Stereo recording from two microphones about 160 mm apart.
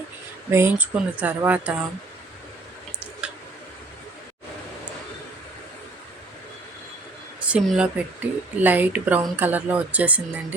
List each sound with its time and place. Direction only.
0.5 s speech: 15° right (ahead or behind)
3.2 s clicking: 5° right (ahead or behind)
7.4 s speech: 5° right (ahead or behind)